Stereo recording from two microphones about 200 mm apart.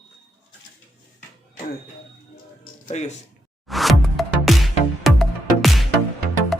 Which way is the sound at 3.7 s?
Centre (ahead or behind).